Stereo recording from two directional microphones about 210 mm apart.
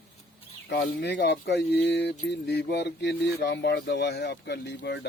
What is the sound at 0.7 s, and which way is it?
Speech, 55° left (ahead or behind).